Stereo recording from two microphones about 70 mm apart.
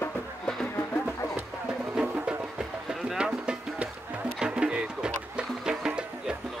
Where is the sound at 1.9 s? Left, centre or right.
Centre.